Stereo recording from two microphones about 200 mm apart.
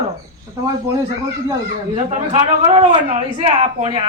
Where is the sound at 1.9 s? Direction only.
30° right (ahead or behind).